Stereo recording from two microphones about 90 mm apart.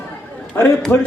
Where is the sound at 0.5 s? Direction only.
25° left (ahead or behind).